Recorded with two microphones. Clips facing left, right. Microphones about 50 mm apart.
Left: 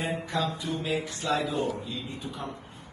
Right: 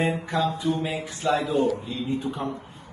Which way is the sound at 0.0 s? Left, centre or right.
Right.